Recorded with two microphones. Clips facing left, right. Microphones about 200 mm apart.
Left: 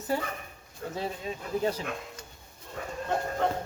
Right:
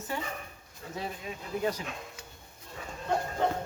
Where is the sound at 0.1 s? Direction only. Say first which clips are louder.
Left 5 dB; 35° left (ahead or behind).